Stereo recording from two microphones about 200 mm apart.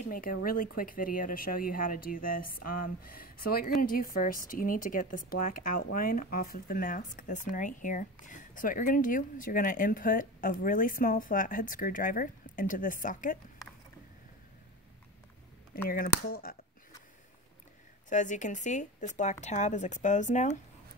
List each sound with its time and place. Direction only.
0.1 s speech: 45° left (ahead or behind)
15.9 s speech: 45° left (ahead or behind)
18.1 s speech: 40° left (ahead or behind)